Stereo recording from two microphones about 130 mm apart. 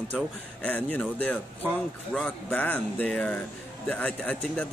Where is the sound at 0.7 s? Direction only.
10° left (ahead or behind).